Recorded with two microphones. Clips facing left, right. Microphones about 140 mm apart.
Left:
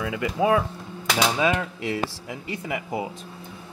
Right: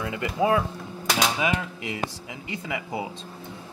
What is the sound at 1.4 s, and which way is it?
Speech, 20° right (ahead or behind).